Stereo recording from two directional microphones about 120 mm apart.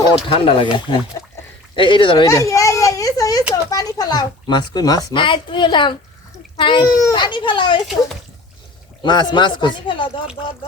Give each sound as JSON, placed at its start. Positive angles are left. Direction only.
{"t": 0.3, "sound": "speech", "side_deg": 50}
{"t": 2.2, "sound": "children playing", "side_deg": 30}
{"t": 3.5, "sound": "a child's voice", "side_deg": 30}
{"t": 6.8, "sound": "a child's voice", "side_deg": 30}
{"t": 9.0, "sound": "a child's voice", "side_deg": 40}